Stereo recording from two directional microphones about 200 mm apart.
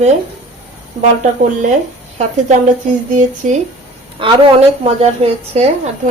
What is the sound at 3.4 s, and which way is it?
Speech, 40° right (ahead or behind).